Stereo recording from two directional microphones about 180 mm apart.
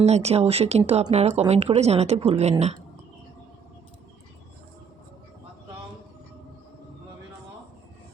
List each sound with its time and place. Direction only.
0.0 s a woman's voice: 35° right (ahead or behind)